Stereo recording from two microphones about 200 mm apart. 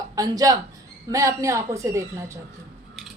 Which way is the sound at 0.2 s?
20° right (ahead or behind).